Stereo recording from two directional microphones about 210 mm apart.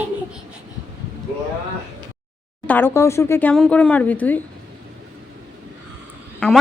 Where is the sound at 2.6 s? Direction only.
10° left (ahead or behind).